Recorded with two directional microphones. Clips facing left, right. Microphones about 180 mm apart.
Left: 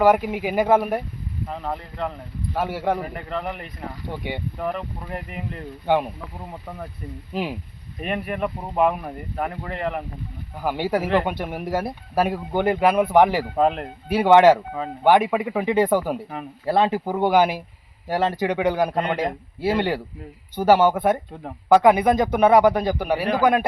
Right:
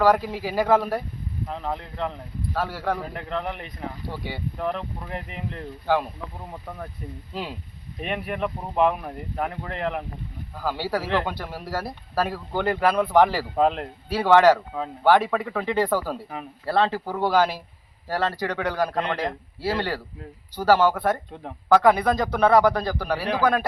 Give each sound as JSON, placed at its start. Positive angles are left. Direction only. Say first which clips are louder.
{"t": 0.0, "sound": "speech", "louder": "left 2 dB", "side_deg": 20}
{"t": 1.5, "sound": "speech", "louder": "left 1 dB", "side_deg": 0}
{"t": 2.5, "sound": "speech", "louder": "left 3 dB", "side_deg": 15}
{"t": 3.1, "sound": "speech", "louder": "left 1 dB", "side_deg": 0}
{"t": 4.1, "sound": "speech", "louder": "left 4 dB", "side_deg": 20}
{"t": 4.5, "sound": "speech", "louder": "left 1 dB", "side_deg": 5}
{"t": 5.8, "sound": "speech", "louder": "left 3 dB", "side_deg": 20}
{"t": 6.5, "sound": "speech", "louder": "left 1 dB", "side_deg": 5}
{"t": 7.3, "sound": "speech", "louder": "left 6 dB", "side_deg": 15}
{"t": 8.0, "sound": "speech", "louder": "left 2 dB", "side_deg": 0}
{"t": 10.6, "sound": "speech", "louder": "left 4 dB", "side_deg": 20}
{"t": 13.6, "sound": "speech", "louder": "even", "side_deg": 0}
{"t": 14.1, "sound": "speech", "louder": "left 3 dB", "side_deg": 20}